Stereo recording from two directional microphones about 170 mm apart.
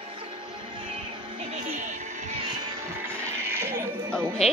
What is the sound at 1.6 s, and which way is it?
Music, 45° right (ahead or behind).